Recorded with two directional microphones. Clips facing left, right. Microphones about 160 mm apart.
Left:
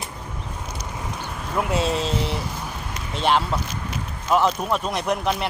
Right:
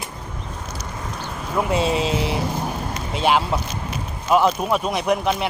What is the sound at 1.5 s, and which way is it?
Speech, centre (ahead or behind).